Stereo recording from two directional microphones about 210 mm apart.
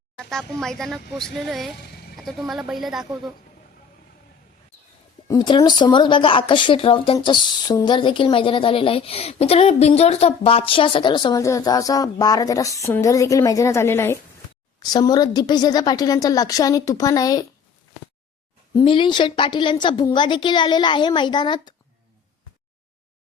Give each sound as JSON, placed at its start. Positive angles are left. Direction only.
{"t": 0.3, "sound": "speech", "side_deg": 0}
{"t": 5.3, "sound": "a woman's voice", "side_deg": 20}
{"t": 18.7, "sound": "a woman's voice", "side_deg": 25}